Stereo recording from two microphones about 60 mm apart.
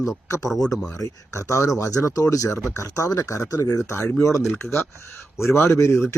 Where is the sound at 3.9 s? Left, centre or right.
Left.